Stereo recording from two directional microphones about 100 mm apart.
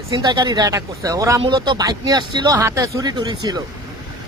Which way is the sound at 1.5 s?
45° right (ahead or behind).